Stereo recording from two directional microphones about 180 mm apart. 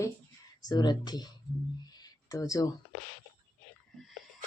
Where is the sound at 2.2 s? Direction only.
20° left (ahead or behind).